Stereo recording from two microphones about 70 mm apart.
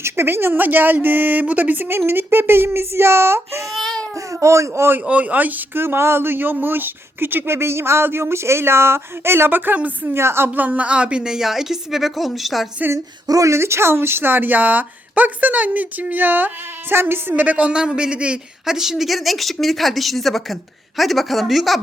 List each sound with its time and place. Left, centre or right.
0.0 s a woman's voice: right
3.8 s baby cry: centre
4.1 s speech: right
4.9 s speech: centre
13.2 s a woman's voice: right
17.4 s a man's voice: centre